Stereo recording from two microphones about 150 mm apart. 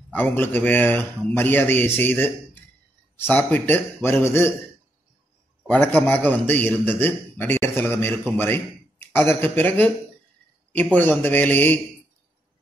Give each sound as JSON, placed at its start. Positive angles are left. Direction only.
{"t": 0.1, "sound": "a man's voice", "side_deg": 10}
{"t": 5.7, "sound": "a man's voice", "side_deg": 10}
{"t": 11.0, "sound": "a man's voice", "side_deg": 10}